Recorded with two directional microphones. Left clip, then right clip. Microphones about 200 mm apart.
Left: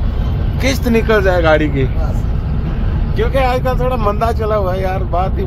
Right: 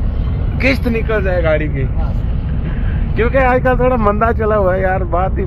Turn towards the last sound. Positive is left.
turn(degrees=5)  # may be behind; listen again after turning